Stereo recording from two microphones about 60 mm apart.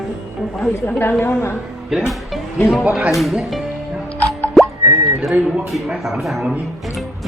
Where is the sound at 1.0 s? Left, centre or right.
Left.